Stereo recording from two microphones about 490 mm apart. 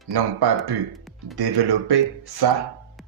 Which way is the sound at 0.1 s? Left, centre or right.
Right.